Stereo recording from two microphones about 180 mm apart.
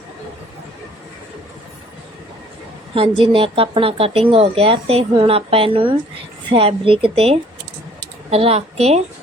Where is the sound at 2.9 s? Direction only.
30° right (ahead or behind).